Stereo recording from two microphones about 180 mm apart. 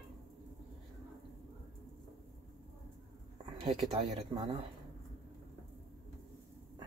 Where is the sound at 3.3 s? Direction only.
35° right (ahead or behind).